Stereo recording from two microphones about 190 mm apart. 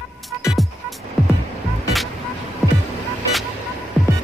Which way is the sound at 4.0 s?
Centre (ahead or behind).